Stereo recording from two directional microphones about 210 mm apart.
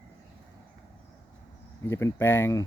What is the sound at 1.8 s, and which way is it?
Speech, 15° left (ahead or behind).